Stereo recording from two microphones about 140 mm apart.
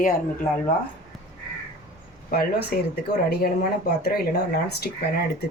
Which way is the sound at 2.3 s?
90° left.